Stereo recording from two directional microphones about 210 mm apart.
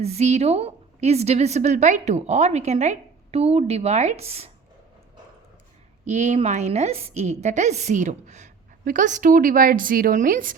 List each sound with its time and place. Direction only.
0.0 s a woman's voice: 30° right (ahead or behind)
6.1 s a woman's voice: 35° right (ahead or behind)